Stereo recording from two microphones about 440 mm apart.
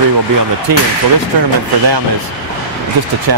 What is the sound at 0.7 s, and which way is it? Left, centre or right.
Speech, right.